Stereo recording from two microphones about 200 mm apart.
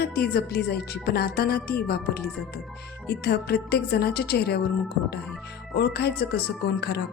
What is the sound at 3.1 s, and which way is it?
Speech, 55° left (ahead or behind).